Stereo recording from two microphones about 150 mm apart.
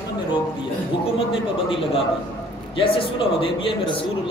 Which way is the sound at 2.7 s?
35° left (ahead or behind).